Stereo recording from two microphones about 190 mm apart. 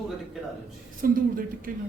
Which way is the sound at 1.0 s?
45° right (ahead or behind).